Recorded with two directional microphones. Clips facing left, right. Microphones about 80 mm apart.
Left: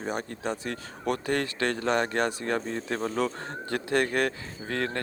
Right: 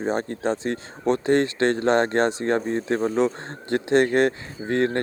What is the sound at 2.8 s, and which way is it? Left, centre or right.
Speech, right.